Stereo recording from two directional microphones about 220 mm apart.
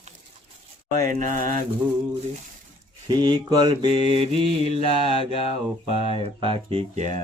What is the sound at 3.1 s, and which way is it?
Speech, 20° right (ahead or behind).